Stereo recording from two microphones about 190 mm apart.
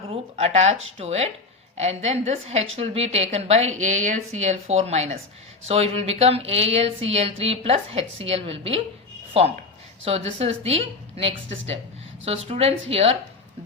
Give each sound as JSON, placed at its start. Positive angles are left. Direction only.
{"t": 0.1, "sound": "speech", "side_deg": -35}
{"t": 11.3, "sound": "speech", "side_deg": -75}
{"t": 12.2, "sound": "speech", "side_deg": -30}